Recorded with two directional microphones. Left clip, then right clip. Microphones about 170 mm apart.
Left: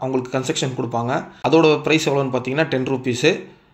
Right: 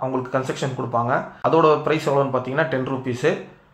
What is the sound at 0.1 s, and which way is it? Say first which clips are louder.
Speech: left 2 dB; 30° left (ahead or behind).